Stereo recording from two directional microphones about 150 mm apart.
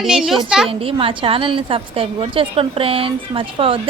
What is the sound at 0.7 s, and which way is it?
A woman's voice, 35° right (ahead or behind).